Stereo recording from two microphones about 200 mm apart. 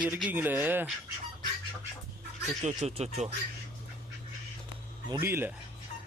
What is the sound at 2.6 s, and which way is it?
Speech, 30° right (ahead or behind).